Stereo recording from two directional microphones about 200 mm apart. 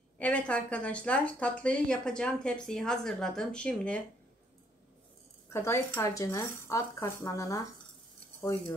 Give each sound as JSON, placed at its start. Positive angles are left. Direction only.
{"t": 0.2, "sound": "a woman's voice", "side_deg": 5}
{"t": 5.5, "sound": "speech", "side_deg": 15}